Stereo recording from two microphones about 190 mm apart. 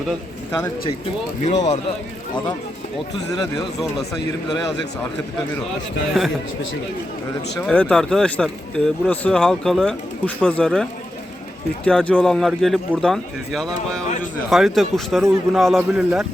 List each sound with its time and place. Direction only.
1.5 s speech: 35° left (ahead or behind)
6.2 s speech: centre (ahead or behind)
7.7 s speech: 5° left (ahead or behind)
11.9 s speech: 5° left (ahead or behind)